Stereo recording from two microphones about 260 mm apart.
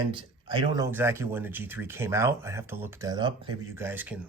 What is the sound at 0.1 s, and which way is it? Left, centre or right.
Speech, centre.